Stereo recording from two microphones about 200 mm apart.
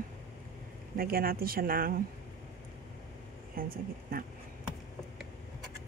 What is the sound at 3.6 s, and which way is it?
Speech, 45° right (ahead or behind).